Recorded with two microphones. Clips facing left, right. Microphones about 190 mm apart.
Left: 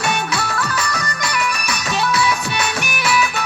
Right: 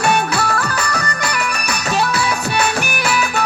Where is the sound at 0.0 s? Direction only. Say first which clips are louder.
Right 5 dB; 55° right (ahead or behind).